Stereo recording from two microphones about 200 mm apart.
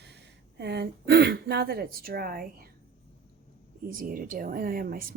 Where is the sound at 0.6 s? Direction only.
55° right (ahead or behind).